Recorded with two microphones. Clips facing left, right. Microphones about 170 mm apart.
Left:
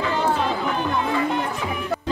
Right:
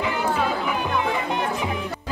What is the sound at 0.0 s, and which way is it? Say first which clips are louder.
Music: left 1 dB; 15° right (ahead or behind).